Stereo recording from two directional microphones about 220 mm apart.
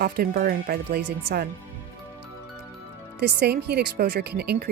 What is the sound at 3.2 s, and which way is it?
Speech, 50° right (ahead or behind).